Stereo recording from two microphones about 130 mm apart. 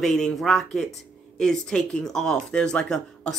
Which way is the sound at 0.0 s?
5° left (ahead or behind).